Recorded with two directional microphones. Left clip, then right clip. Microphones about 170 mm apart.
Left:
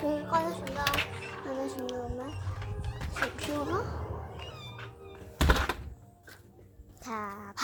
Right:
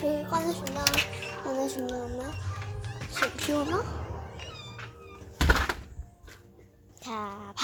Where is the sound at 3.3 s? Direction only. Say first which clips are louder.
Right 4 dB; 10° right (ahead or behind).